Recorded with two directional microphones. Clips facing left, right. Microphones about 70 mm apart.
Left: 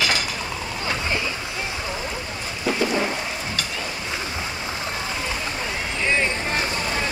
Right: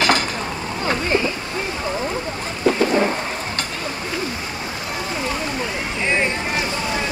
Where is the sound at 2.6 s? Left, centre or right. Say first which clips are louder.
Right 5 dB; right.